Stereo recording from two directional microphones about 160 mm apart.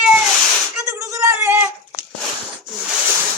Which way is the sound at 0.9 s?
20° right (ahead or behind).